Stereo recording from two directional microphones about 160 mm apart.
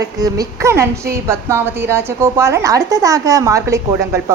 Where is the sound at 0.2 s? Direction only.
20° right (ahead or behind).